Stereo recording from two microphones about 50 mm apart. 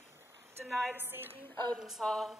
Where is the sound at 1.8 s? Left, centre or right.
Centre.